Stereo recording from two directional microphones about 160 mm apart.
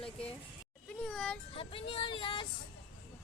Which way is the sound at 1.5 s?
35° left (ahead or behind).